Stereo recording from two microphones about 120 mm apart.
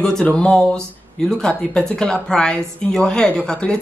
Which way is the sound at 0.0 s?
5° left (ahead or behind).